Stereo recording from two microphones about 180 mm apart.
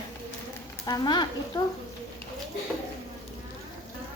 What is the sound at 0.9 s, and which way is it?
Speech, 25° left (ahead or behind).